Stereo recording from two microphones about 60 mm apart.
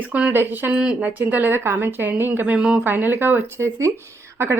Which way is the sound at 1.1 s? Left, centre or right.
Right.